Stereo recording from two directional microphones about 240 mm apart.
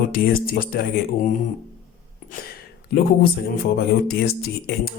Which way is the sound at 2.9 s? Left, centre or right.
Left.